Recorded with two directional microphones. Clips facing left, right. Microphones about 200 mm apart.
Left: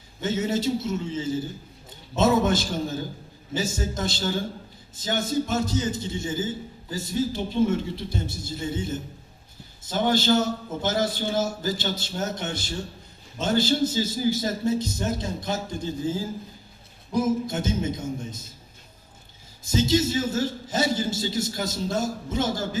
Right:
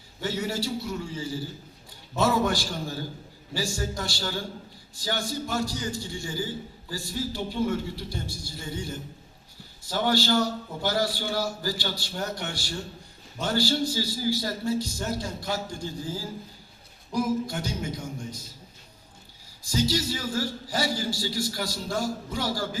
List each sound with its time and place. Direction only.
0.2 s a man's voice: 20° left (ahead or behind)
19.6 s a man's voice: 25° left (ahead or behind)